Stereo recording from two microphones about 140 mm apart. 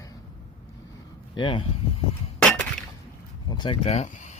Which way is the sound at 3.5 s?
30° left (ahead or behind).